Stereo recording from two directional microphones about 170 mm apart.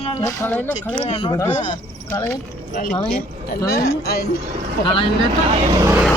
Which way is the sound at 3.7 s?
70° left (ahead or behind).